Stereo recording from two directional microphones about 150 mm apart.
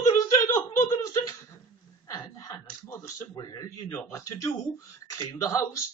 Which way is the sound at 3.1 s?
25° left (ahead or behind).